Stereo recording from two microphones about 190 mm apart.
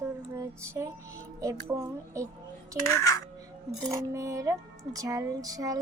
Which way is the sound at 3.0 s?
20° left (ahead or behind).